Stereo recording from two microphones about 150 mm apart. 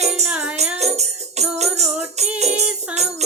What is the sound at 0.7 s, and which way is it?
Music, 45° right (ahead or behind).